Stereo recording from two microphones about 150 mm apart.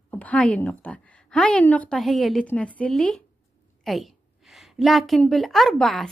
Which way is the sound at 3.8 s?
Centre (ahead or behind).